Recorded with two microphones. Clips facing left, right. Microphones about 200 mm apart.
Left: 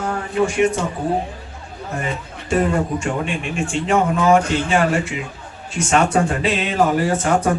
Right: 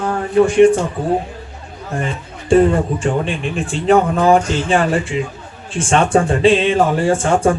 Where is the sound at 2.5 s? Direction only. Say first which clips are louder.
Right 6 dB; 30° right (ahead or behind).